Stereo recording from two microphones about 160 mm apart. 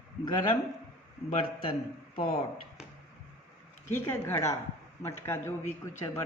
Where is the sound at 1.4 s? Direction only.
30° left (ahead or behind).